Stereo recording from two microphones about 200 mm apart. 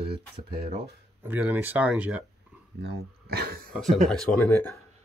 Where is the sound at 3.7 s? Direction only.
Centre (ahead or behind).